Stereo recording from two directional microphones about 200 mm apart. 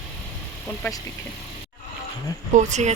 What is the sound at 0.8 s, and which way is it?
Speech, 15° left (ahead or behind).